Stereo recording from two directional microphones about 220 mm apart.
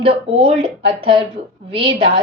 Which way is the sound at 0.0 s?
25° right (ahead or behind).